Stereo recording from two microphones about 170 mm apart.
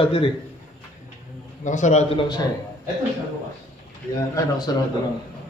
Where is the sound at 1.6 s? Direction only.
45° left (ahead or behind).